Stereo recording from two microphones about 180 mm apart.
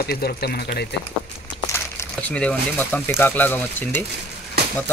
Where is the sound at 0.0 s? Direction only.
60° left (ahead or behind).